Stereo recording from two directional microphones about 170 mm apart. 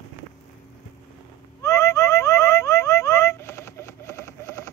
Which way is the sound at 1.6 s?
15° left (ahead or behind).